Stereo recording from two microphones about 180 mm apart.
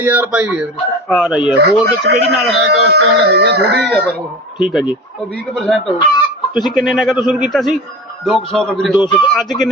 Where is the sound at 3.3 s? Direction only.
65° right (ahead or behind).